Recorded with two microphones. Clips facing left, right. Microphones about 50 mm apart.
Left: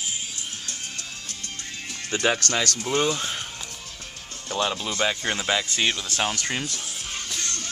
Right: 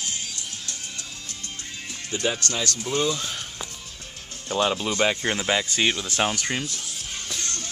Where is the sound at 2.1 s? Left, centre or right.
Left.